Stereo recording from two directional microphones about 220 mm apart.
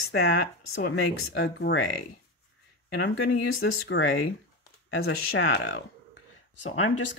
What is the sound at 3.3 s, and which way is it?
Speech, 65° left (ahead or behind).